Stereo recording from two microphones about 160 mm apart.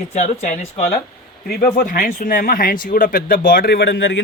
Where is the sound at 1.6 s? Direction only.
60° left (ahead or behind); by 4.2 s 90° left.